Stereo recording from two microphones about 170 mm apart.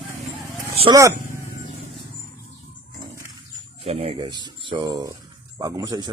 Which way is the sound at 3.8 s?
35° right (ahead or behind).